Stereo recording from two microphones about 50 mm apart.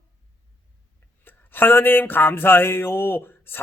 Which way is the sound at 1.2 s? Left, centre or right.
Left.